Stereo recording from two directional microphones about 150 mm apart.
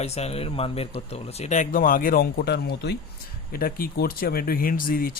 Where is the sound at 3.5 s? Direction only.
75° left (ahead or behind).